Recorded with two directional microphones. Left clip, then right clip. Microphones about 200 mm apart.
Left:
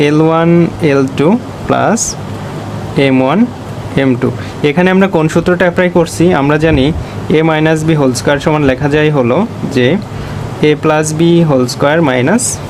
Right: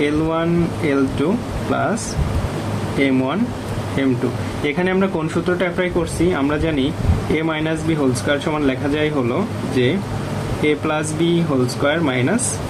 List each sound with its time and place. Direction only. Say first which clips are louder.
0.0 s speech: left 9 dB; 55° left (ahead or behind)
3.0 s speech: left 9 dB; 55° left (ahead or behind)
4.6 s speech: left 9 dB; 50° left (ahead or behind)